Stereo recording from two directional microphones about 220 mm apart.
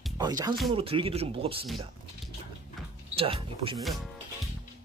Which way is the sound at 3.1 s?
25° right (ahead or behind).